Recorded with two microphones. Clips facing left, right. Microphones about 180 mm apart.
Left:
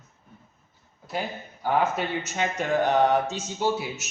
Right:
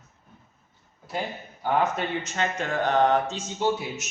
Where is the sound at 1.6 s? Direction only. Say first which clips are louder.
Even; 5° left (ahead or behind).